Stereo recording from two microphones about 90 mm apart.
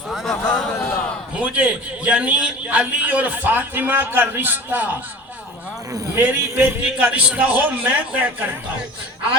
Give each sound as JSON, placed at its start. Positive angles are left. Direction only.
{"t": 0.1, "sound": "a sound", "side_deg": 5}
{"t": 1.4, "sound": "a man's voice", "side_deg": -15}
{"t": 6.1, "sound": "a man's voice", "side_deg": -20}